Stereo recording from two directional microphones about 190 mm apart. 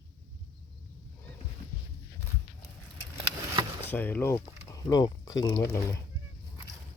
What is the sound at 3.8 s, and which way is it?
Speech, 10° left (ahead or behind).